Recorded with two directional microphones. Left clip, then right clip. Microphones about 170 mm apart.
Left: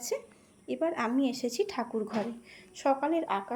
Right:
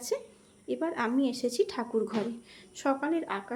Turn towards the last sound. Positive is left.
turn(degrees=10)  # may be behind; listen again after turning